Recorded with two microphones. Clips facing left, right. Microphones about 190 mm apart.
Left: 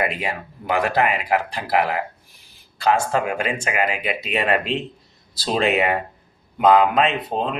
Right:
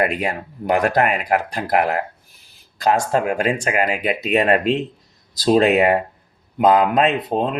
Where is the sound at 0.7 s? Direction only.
45° right (ahead or behind).